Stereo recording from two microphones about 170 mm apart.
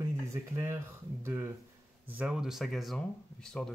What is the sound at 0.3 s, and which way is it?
Speech, 15° right (ahead or behind).